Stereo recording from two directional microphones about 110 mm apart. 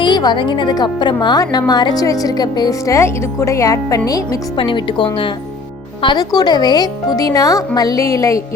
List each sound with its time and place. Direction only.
0.0 s a woman's voice: 40° left (ahead or behind)
4.5 s a woman's voice: 50° left (ahead or behind); by 8.4 s 30° left (ahead or behind)